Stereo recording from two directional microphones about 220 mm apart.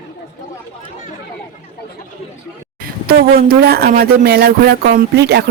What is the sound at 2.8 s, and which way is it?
Speech, 45° right (ahead or behind).